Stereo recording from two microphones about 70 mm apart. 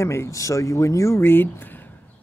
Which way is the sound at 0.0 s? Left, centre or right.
Left.